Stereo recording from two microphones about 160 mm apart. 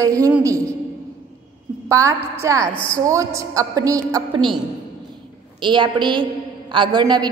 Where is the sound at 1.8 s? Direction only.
20° right (ahead or behind).